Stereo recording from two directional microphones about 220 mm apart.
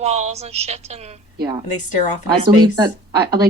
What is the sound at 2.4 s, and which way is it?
Speech, 20° right (ahead or behind).